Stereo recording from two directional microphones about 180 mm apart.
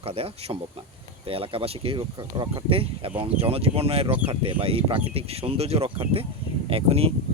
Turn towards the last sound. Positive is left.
turn(degrees=-35)  # may be behind; listen again after turning